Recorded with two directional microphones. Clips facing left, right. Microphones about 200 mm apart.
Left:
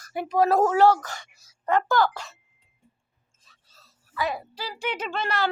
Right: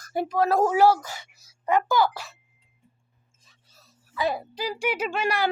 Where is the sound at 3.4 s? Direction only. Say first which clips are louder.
Right 1 dB; 15° right (ahead or behind).